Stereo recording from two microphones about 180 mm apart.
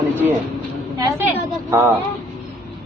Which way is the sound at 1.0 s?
10° right (ahead or behind).